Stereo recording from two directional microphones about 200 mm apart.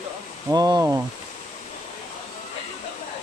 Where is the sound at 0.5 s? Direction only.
20° right (ahead or behind).